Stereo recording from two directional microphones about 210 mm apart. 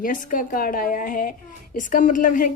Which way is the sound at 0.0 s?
40° left (ahead or behind).